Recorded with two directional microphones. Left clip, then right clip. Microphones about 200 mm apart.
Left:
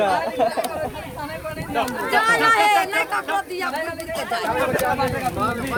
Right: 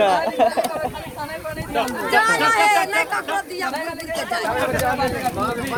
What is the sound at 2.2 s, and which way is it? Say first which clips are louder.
Speech: left 1 dB; 45° left (ahead or behind).